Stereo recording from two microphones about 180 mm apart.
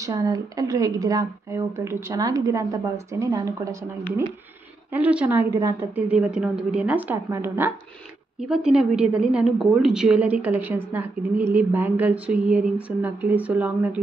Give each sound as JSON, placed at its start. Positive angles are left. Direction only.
{"t": 0.0, "sound": "speech", "side_deg": -20}
{"t": 4.9, "sound": "a woman's voice", "side_deg": -5}